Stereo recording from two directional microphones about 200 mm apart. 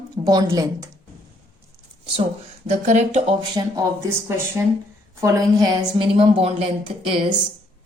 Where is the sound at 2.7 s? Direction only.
35° right (ahead or behind).